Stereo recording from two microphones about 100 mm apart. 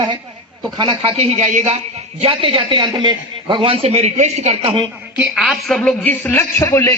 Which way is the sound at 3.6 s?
70° right (ahead or behind).